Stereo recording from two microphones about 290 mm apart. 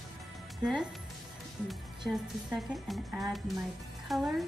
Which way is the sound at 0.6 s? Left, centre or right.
Centre.